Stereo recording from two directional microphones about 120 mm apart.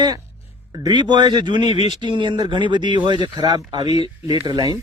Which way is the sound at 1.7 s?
55° left (ahead or behind).